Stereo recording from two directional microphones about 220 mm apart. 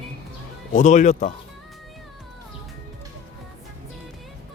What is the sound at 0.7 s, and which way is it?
Speech, 35° left (ahead or behind).